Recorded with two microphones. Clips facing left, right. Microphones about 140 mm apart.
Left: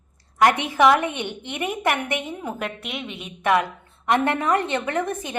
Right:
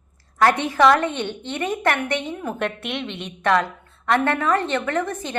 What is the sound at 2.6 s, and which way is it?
A woman's voice, centre (ahead or behind).